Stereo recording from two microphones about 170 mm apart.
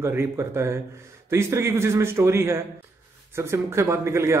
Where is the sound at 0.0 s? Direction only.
15° right (ahead or behind).